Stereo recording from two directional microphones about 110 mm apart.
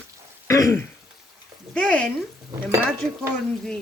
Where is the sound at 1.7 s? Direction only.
10° left (ahead or behind).